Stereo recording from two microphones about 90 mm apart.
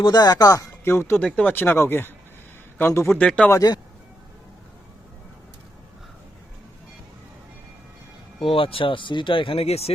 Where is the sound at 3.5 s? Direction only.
45° left (ahead or behind).